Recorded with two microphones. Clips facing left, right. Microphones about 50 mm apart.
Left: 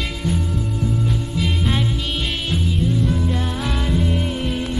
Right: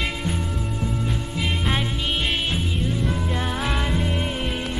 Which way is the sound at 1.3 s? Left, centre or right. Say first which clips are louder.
Left 1 dB; centre.